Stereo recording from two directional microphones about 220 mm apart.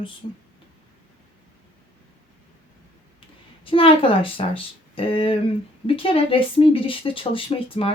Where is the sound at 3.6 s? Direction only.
25° left (ahead or behind).